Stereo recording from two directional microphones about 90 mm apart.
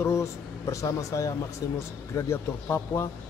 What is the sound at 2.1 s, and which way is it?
A man's voice, 30° left (ahead or behind).